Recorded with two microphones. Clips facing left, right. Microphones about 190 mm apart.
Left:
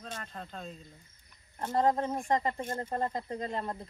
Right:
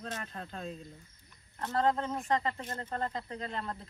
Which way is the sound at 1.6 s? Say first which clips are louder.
Left 2 dB; 15° left (ahead or behind).